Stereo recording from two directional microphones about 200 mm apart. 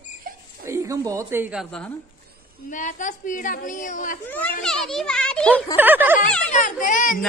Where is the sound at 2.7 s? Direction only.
40° left (ahead or behind).